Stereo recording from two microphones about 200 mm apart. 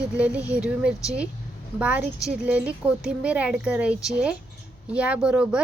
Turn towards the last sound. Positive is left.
turn(degrees=-5)  # may be behind; listen again after turning